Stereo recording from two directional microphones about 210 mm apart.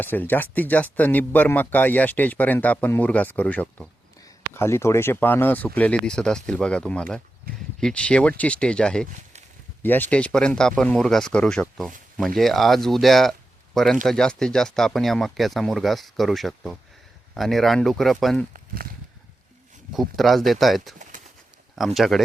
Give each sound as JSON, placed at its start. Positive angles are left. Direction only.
{"t": 0.0, "sound": "speech", "side_deg": 10}
{"t": 7.5, "sound": "speech", "side_deg": -45}
{"t": 7.8, "sound": "speech", "side_deg": 5}
{"t": 18.5, "sound": "speech", "side_deg": -45}
{"t": 19.9, "sound": "speech", "side_deg": 0}